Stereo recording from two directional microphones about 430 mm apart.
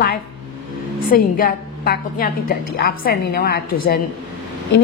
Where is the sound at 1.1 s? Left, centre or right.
Centre.